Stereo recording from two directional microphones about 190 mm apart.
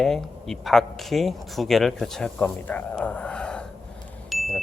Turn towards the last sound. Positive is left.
turn(degrees=0)  # may be behind; listen again after turning